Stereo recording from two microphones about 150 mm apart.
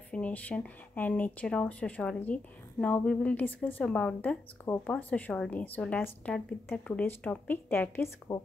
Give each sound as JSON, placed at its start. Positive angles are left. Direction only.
{"t": 0.1, "sound": "speech", "side_deg": 10}
{"t": 8.3, "sound": "speech", "side_deg": 20}